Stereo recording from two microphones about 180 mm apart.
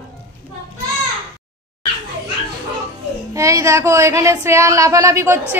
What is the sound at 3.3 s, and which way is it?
Speech, 15° right (ahead or behind).